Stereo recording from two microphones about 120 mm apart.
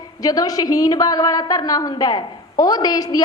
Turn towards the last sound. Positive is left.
turn(degrees=30)  # may be behind; listen again after turning